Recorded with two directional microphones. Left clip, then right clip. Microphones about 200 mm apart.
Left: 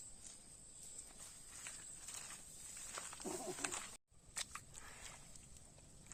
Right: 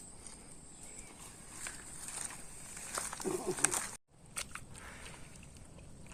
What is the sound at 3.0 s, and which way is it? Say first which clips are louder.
Wild animals: right 10 dB; 55° right (ahead or behind).